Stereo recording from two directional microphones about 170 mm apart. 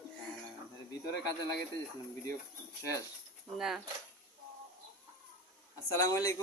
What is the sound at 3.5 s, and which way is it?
Speech, centre (ahead or behind).